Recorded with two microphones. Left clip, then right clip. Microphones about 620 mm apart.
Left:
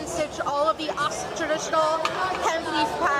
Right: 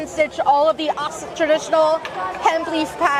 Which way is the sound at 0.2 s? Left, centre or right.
Right.